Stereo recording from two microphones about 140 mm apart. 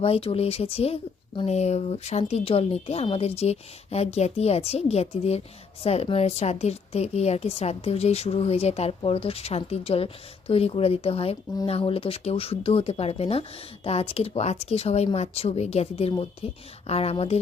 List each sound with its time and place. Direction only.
0.0 s a woman's voice: 45° left (ahead or behind)